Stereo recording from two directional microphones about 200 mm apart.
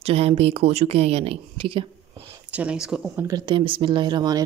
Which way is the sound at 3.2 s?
20° right (ahead or behind).